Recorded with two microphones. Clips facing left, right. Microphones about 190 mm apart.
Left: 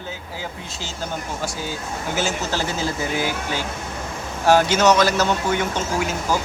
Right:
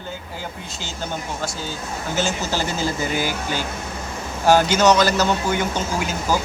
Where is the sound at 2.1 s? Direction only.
5° left (ahead or behind).